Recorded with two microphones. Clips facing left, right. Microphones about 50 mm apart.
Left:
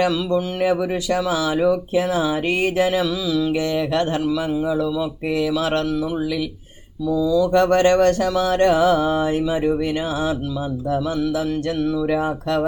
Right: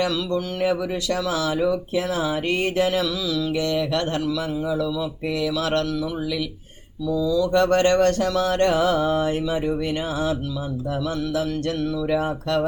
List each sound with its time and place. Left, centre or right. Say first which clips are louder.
0.0 s speech: left 4 dB; left
7.1 s speech: left 3 dB; centre
7.5 s speech: left 2 dB; left
11.2 s speech: left 3 dB; left